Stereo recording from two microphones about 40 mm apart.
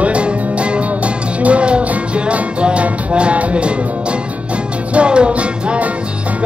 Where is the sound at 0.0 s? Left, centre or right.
Right.